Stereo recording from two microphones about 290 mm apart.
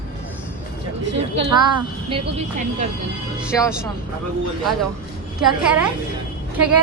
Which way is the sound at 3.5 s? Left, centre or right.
Centre.